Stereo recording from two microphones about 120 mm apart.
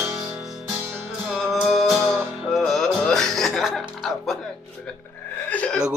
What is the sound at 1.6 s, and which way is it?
Music, centre (ahead or behind).